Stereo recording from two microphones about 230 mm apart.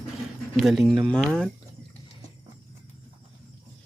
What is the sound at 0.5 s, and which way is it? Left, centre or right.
Speech, centre.